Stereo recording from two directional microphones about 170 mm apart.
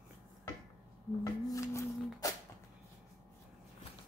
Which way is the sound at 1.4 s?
20° left (ahead or behind).